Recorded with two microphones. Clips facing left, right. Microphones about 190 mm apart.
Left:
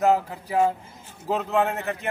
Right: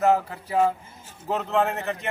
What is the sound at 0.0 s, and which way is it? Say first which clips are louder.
A man's voice: even; 10° left (ahead or behind).